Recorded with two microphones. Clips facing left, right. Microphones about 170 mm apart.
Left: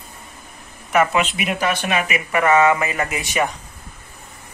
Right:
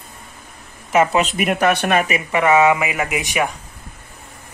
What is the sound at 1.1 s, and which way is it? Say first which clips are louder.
Speech: right 3 dB; 45° right (ahead or behind).